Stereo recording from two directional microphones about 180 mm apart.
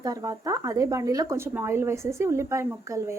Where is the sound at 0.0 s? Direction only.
20° right (ahead or behind).